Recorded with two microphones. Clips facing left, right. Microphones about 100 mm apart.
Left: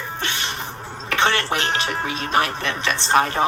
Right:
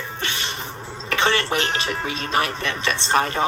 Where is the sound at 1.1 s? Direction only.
55° left (ahead or behind).